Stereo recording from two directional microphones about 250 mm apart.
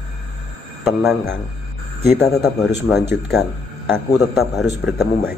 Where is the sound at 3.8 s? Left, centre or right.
Centre.